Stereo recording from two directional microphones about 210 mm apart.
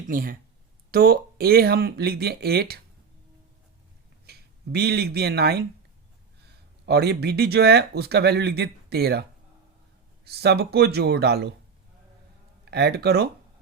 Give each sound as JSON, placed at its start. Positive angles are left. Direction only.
{"t": 0.1, "sound": "speech", "side_deg": -40}
{"t": 4.3, "sound": "speech", "side_deg": -50}
{"t": 6.8, "sound": "speech", "side_deg": -50}
{"t": 10.2, "sound": "speech", "side_deg": -50}
{"t": 12.7, "sound": "speech", "side_deg": -50}